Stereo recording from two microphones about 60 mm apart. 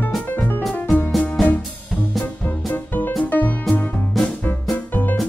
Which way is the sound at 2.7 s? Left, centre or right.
Left.